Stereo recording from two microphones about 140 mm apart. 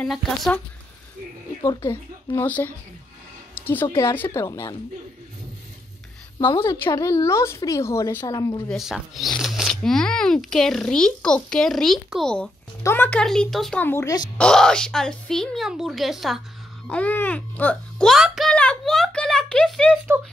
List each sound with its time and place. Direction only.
0.0 s speech: centre (ahead or behind)
1.9 s a woman's voice: 15° left (ahead or behind)
3.5 s a sound: 15° left (ahead or behind)
3.9 s speech: 15° left (ahead or behind)
6.6 s speech: 20° left (ahead or behind)
8.6 s speech: centre (ahead or behind)
12.8 s a woman's voice: 15° left (ahead or behind)
13.8 s a woman's voice: 15° left (ahead or behind)
14.4 s speech: 5° left (ahead or behind)
16.8 s a sound: 10° left (ahead or behind)